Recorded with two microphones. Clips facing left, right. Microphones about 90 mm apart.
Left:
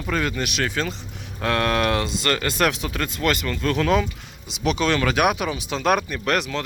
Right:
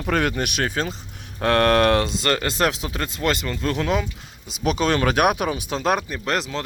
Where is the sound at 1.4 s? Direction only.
45° right (ahead or behind); by 3.8 s 25° right (ahead or behind).